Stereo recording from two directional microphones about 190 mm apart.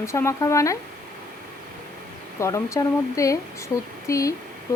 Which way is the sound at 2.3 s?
15° left (ahead or behind).